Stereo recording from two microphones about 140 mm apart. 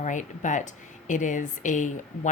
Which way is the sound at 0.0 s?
65° left (ahead or behind).